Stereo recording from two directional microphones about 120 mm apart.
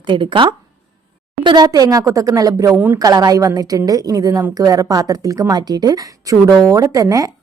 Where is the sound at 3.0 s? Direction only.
30° right (ahead or behind).